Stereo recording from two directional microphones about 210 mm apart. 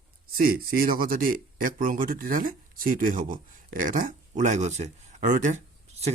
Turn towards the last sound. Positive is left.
turn(degrees=-30)  # may be behind; listen again after turning